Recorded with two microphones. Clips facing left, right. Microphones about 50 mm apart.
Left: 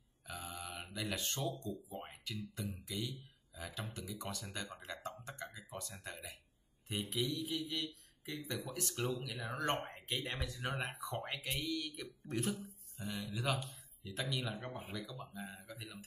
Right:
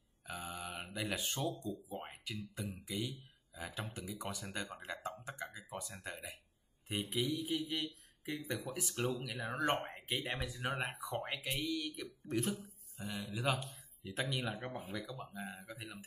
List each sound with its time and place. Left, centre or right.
0.3 s mantra: centre
1.9 s music: centre
2.5 s speech: centre
9.8 s a sound: centre
10.0 s speech: centre
13.3 s speech: centre
13.6 s a sound: centre
14.3 s speech: right
15.2 s speech: centre